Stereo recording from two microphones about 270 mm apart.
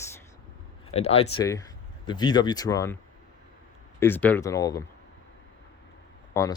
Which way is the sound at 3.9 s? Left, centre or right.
Centre.